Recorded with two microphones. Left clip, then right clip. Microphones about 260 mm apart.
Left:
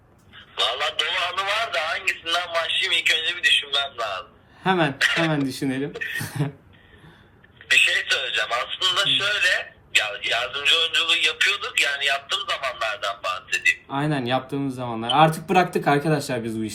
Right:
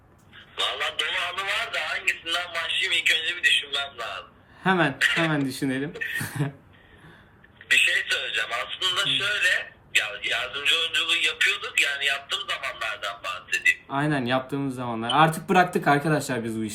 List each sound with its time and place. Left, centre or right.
0.3 s a man's voice: centre
4.6 s speech: centre
4.9 s speech: centre
5.5 s speech: centre
5.9 s speech: centre
6.2 s speech: centre
7.7 s a man's voice: centre
13.8 s speech: centre